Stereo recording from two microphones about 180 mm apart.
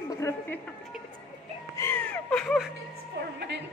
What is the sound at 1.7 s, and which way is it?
Music, 15° left (ahead or behind).